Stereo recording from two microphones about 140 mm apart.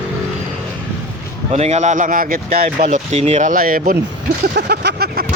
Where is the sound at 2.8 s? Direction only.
55° right (ahead or behind); by 4.0 s 90° right.